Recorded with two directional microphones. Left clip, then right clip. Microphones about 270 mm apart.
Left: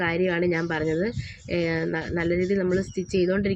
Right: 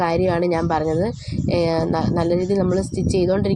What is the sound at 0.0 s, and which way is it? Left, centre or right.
Speech, centre.